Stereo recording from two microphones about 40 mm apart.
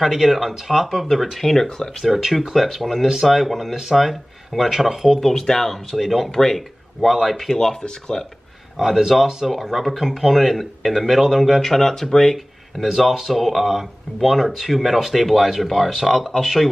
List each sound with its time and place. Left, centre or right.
0.0 s speech: centre
1.4 s speech: centre
2.0 s speech: centre
5.3 s speech: centre
5.9 s speech: centre
6.3 s speech: centre
7.0 s speech: centre
7.3 s speech: centre
8.7 s speech: centre
11.7 s speech: centre
12.8 s speech: centre